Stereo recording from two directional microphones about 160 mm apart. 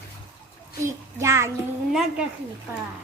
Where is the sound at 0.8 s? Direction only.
20° right (ahead or behind).